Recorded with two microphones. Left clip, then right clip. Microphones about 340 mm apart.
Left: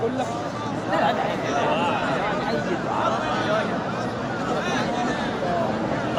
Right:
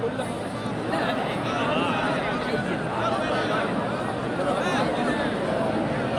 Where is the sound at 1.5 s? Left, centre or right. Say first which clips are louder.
Left 3 dB; left.